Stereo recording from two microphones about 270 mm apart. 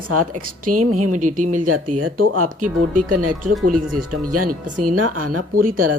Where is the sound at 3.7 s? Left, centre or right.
Right.